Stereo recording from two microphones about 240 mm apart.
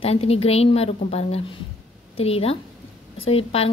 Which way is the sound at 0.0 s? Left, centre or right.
Left.